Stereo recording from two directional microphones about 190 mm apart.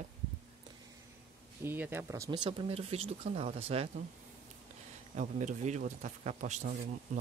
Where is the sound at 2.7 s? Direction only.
30° right (ahead or behind).